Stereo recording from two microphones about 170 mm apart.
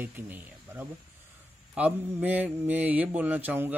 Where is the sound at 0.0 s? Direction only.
10° right (ahead or behind).